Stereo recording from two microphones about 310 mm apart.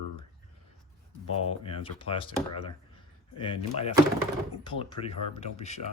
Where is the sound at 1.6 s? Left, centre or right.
Centre.